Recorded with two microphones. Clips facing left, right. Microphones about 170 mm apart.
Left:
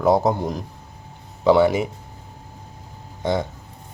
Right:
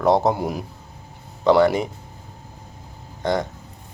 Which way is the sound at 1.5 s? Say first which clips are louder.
Even; 5° left (ahead or behind).